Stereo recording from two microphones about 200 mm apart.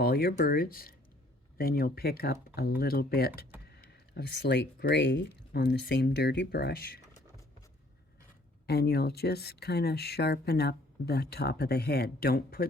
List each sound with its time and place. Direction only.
0.0 s speech: 50° left (ahead or behind)
8.6 s speech: 55° left (ahead or behind)